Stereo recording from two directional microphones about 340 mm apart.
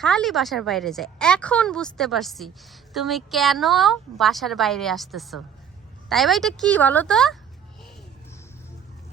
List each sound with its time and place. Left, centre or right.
0.0 s a woman's voice: centre